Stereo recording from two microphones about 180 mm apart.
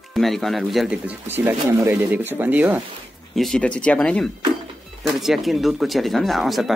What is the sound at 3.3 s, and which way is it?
Speech, centre (ahead or behind).